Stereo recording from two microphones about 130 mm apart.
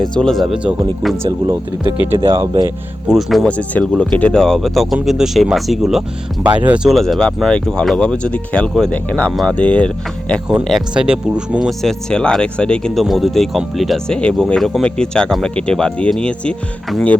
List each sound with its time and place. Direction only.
0.0 s speech: 5° left (ahead or behind)
2.1 s speech: 40° right (ahead or behind)
3.1 s speech: centre (ahead or behind)
6.6 s speech: 15° right (ahead or behind)
6.9 s speech: centre (ahead or behind)